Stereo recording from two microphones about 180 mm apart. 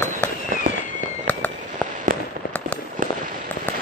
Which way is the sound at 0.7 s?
40° right (ahead or behind).